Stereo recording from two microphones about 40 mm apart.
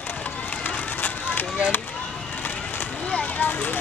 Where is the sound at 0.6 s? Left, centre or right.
Left.